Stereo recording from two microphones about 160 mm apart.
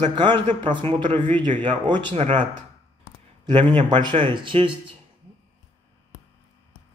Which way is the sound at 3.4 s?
30° right (ahead or behind).